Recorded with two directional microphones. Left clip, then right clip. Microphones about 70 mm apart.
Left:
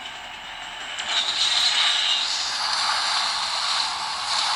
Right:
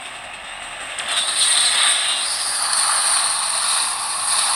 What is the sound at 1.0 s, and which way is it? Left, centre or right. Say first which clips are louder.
Vehicle: right 2 dB; right.